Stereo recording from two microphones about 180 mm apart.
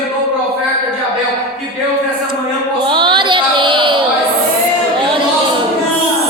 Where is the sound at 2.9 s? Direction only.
25° right (ahead or behind).